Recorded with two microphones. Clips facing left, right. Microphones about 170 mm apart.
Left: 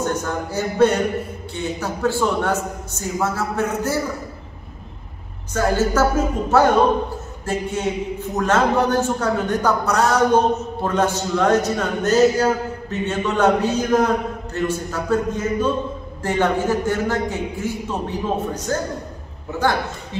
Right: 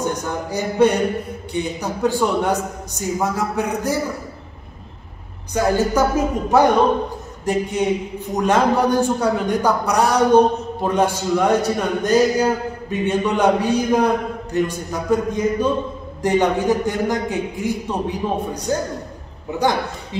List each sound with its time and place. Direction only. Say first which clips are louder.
0.0 s a man's voice: even; 15° right (ahead or behind)
5.5 s a man's voice: right 1 dB; 15° right (ahead or behind)